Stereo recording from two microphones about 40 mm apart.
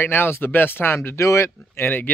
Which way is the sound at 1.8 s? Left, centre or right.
Left.